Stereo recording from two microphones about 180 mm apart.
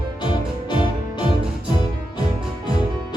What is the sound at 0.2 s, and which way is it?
Music, 25° left (ahead or behind).